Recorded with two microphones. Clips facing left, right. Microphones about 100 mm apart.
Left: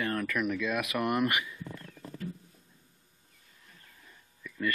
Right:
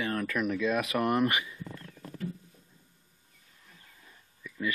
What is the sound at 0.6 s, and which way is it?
Speech, 30° right (ahead or behind).